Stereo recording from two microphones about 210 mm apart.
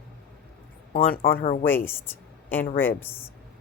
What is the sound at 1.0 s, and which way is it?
Speech, 45° left (ahead or behind).